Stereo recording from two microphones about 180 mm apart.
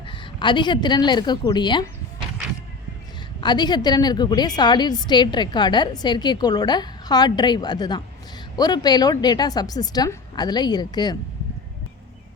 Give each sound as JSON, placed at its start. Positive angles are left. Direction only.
{"t": 0.0, "sound": "a woman's voice", "side_deg": 30}
{"t": 3.4, "sound": "a woman's voice", "side_deg": 25}